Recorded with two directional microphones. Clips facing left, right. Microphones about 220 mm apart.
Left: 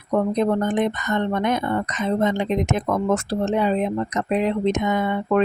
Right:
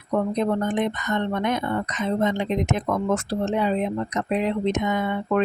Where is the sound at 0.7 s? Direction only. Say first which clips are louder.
Left 2 dB; 45° left (ahead or behind).